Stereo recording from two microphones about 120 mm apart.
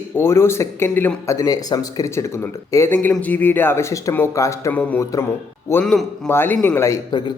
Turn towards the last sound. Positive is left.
turn(degrees=25)  # may be behind; listen again after turning